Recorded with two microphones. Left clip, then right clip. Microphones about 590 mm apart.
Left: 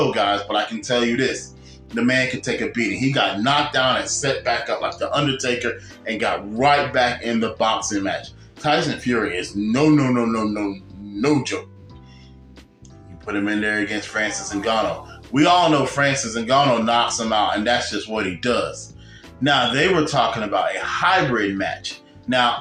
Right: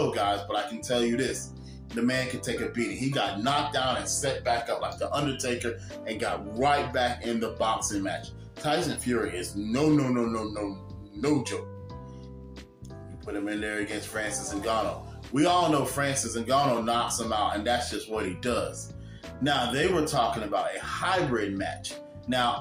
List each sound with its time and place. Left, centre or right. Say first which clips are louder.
0.1 s music: left 8 dB; right
13.2 s speech: left 10 dB; right
15.4 s music: left 8 dB; right